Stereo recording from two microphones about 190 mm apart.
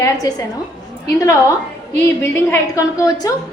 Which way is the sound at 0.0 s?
20° left (ahead or behind).